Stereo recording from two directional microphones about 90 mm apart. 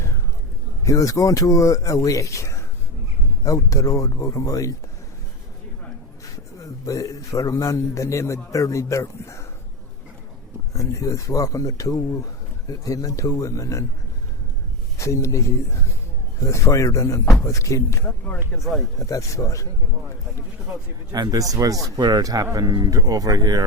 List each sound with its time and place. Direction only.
0.9 s a man's voice: 35° left (ahead or behind)
6.8 s a man's voice: 40° left (ahead or behind)
10.8 s a man's voice: 35° left (ahead or behind)
14.9 s a man's voice: 35° left (ahead or behind)
18.5 s speech: 10° left (ahead or behind)
18.9 s a man's voice: 40° left (ahead or behind)
21.1 s speech: 45° right (ahead or behind)